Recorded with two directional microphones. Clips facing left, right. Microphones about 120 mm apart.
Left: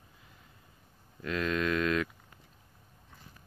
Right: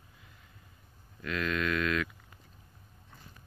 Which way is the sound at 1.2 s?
30° left (ahead or behind).